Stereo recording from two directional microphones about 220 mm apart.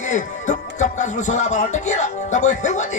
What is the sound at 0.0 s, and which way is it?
Music, 35° left (ahead or behind).